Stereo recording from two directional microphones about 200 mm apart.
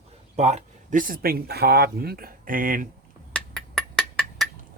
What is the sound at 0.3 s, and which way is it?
Speech, 35° right (ahead or behind).